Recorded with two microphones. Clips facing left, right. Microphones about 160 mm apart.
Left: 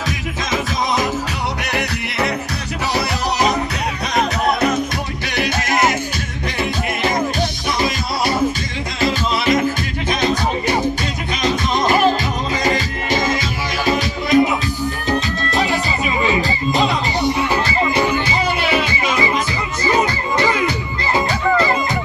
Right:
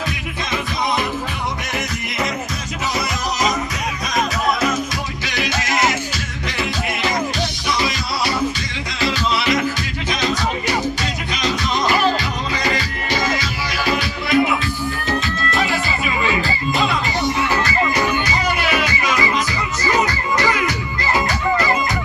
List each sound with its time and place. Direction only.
1.7 s music: 65° left (ahead or behind)
4.1 s music: 60° left (ahead or behind)
9.0 s music: 50° left (ahead or behind)
13.8 s music: 20° left (ahead or behind)
15.7 s music: 25° left (ahead or behind)
17.6 s music: 25° left (ahead or behind)